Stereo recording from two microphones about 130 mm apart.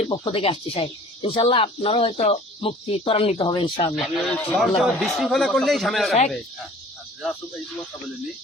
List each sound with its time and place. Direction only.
0.1 s speech: 40° left (ahead or behind)
3.3 s speech: 35° left (ahead or behind)
3.9 s a man's voice: centre (ahead or behind)